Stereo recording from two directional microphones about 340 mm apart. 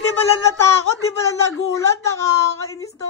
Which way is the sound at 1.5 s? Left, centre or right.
Left.